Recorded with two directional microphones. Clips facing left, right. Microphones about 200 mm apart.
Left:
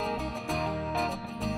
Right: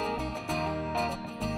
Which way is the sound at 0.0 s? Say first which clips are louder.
Even; centre (ahead or behind).